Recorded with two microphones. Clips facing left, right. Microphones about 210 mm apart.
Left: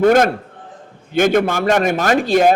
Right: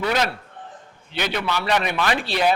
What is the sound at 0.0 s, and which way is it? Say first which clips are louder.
A man's voice: left 11 dB; 50° left (ahead or behind).